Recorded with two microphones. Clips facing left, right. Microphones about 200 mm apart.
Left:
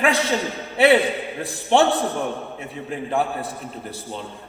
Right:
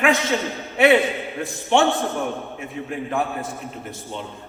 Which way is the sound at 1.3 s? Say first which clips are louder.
Left 1 dB; 35° left (ahead or behind).